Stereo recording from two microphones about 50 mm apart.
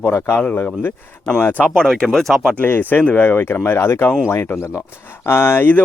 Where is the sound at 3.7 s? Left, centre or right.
Left.